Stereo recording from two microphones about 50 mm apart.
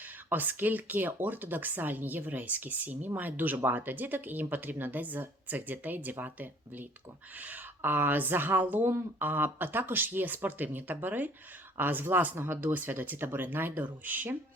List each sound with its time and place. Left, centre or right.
0.3 s speech: right